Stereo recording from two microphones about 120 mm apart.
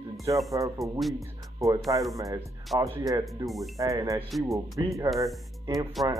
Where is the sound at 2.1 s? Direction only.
30° right (ahead or behind).